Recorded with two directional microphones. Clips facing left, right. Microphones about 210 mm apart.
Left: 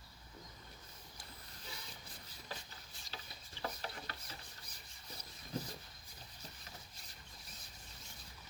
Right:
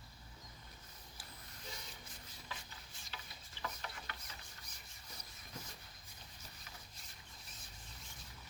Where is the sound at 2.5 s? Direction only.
35° left (ahead or behind).